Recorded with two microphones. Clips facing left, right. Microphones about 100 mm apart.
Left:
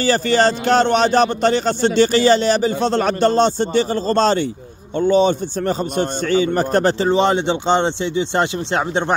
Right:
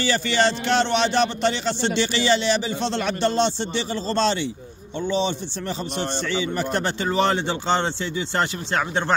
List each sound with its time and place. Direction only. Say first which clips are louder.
0.0 s a man's voice: left 6 dB; 40° left (ahead or behind)
7.1 s speech: left 5 dB; 20° left (ahead or behind)